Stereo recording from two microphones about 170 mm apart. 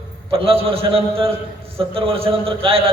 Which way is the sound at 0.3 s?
35° right (ahead or behind).